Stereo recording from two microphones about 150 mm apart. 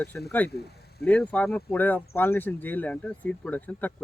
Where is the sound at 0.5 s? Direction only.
90° left.